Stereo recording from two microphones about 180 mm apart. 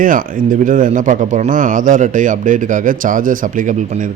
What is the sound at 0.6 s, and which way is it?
A man's voice, 45° right (ahead or behind).